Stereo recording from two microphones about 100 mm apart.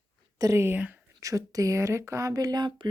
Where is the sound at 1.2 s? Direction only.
35° right (ahead or behind).